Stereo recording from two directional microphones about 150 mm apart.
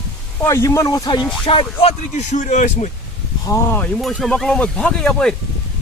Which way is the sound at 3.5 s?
15° left (ahead or behind).